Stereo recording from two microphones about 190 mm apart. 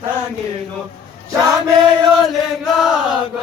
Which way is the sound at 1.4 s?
20° right (ahead or behind).